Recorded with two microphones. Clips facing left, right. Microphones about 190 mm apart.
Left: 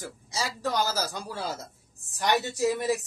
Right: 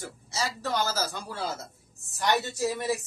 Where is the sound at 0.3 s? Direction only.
15° left (ahead or behind).